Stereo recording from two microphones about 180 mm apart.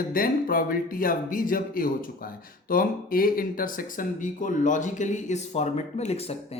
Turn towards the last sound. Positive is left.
turn(degrees=35)  # may be behind; listen again after turning